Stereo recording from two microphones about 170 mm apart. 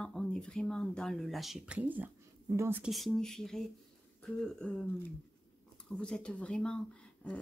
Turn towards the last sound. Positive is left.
turn(degrees=5)  # may be behind; listen again after turning